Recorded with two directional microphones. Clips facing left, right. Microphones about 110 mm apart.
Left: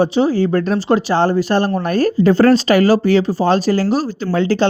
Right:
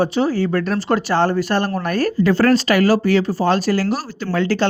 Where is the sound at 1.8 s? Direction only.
25° left (ahead or behind).